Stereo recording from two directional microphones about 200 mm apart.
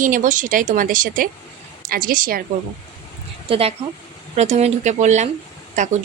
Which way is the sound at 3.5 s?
30° right (ahead or behind).